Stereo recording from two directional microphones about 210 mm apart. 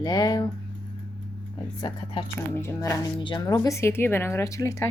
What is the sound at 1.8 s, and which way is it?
Speech, 25° left (ahead or behind).